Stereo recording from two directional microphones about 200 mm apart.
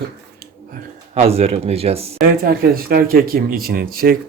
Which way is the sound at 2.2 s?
50° right (ahead or behind).